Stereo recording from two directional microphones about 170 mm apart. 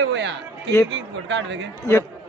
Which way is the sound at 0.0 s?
90° right.